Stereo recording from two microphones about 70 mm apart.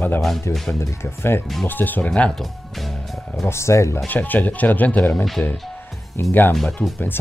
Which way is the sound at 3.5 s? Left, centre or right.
Left.